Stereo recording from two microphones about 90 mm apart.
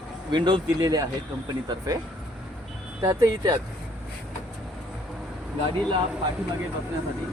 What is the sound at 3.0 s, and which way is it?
Speech, 35° right (ahead or behind).